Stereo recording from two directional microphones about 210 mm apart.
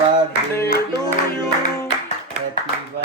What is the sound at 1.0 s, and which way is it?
Music, 15° left (ahead or behind).